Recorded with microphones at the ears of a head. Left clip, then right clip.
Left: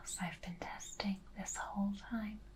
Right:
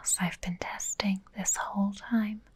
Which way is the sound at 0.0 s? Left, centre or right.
Right.